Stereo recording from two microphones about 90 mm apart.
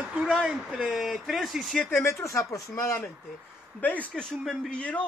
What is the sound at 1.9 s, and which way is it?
Speech, 30° left (ahead or behind).